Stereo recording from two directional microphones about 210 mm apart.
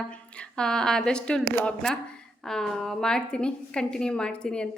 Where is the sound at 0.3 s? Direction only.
5° left (ahead or behind).